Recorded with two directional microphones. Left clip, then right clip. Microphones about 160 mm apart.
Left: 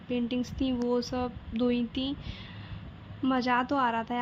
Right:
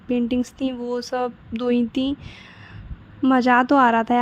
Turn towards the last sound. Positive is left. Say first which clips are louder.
# right 12 dB
turn(degrees=-45)  # may be behind; listen again after turning